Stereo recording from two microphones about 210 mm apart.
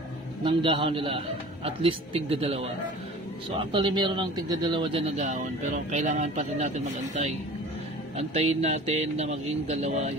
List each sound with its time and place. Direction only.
0.4 s a man's voice: 25° right (ahead or behind)